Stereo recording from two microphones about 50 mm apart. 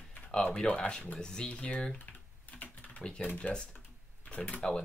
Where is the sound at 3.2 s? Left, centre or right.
Left.